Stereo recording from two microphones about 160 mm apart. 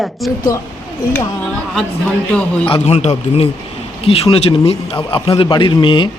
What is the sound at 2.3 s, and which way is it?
Speech, 10° left (ahead or behind).